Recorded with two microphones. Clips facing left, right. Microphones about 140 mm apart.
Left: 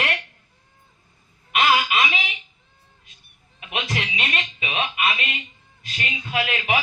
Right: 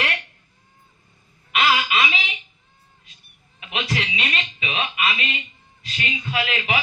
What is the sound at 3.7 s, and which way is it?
A man's voice, 50° left (ahead or behind).